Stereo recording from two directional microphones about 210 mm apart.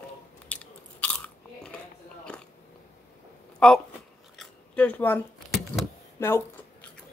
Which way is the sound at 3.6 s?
5° left (ahead or behind).